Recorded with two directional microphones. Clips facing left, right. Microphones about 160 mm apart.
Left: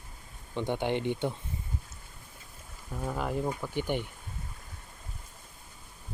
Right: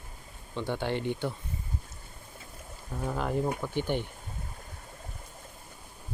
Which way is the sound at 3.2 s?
5° left (ahead or behind).